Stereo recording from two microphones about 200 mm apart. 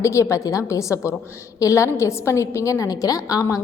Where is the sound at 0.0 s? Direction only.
15° left (ahead or behind).